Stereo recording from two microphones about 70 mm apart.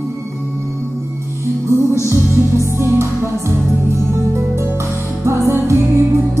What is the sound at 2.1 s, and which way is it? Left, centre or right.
Music, right.